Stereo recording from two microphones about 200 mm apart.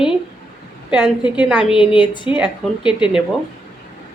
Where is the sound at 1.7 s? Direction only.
25° left (ahead or behind).